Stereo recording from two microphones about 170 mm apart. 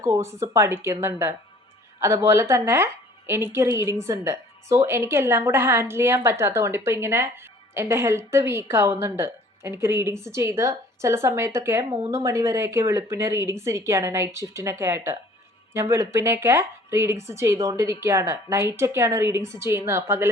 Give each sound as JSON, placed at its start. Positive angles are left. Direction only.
{"t": 0.0, "sound": "a woman's voice", "side_deg": -15}